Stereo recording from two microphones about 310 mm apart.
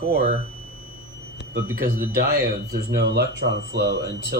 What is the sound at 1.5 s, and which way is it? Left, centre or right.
Speech, right.